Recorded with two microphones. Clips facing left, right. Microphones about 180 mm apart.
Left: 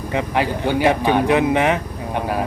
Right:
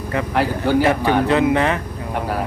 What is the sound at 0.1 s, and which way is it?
Speech, 20° left (ahead or behind).